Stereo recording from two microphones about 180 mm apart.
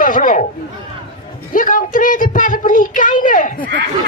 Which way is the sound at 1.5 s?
50° left (ahead or behind).